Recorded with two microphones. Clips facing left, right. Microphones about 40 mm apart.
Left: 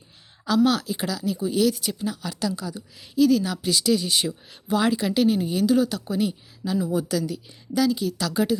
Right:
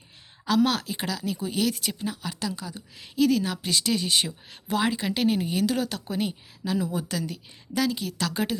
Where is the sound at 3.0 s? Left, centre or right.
Right.